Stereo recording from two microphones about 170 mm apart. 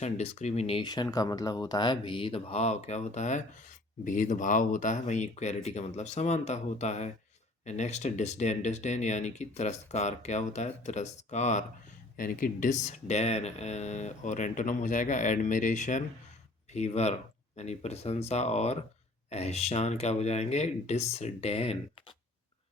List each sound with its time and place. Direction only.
0.0 s speech: 40° left (ahead or behind)